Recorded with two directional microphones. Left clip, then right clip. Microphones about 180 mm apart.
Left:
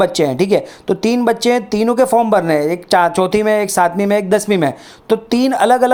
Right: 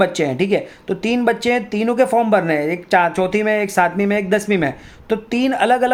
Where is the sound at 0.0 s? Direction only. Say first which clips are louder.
Left 3 dB; 25° left (ahead or behind).